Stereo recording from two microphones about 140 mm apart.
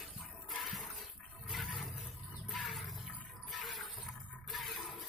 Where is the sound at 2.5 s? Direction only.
Centre (ahead or behind).